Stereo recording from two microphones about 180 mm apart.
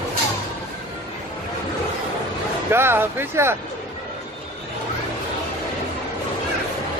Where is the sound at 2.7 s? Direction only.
15° right (ahead or behind).